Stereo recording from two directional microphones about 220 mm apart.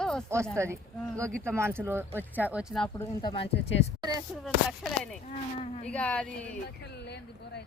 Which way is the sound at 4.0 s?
15° right (ahead or behind).